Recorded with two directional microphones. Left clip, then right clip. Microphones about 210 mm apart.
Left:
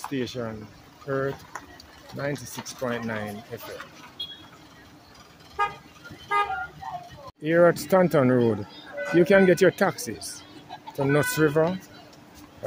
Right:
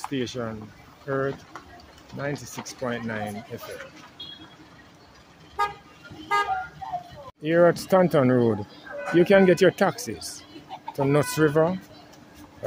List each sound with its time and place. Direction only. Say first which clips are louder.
0.1 s speech: left 1 dB; 5° right (ahead or behind)
6.3 s vehicle: even; 55° right (ahead or behind)
7.4 s speech: even; centre (ahead or behind)